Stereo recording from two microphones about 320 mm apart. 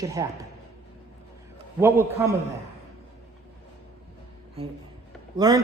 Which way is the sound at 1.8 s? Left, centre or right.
Centre.